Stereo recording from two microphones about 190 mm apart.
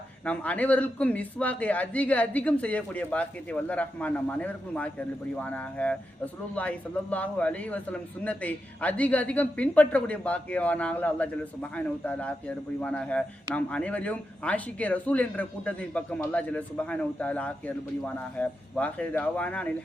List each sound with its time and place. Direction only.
0.3 s a man's voice: 5° left (ahead or behind)